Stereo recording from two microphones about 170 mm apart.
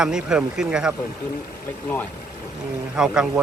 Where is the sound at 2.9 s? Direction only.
5° right (ahead or behind).